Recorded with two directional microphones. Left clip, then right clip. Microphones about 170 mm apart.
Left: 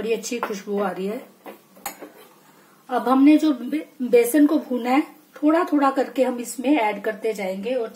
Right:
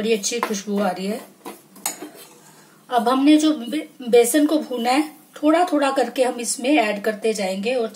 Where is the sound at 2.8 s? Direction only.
30° left (ahead or behind).